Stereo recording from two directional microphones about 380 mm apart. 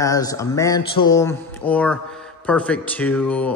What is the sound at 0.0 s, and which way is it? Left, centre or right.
Speech, centre.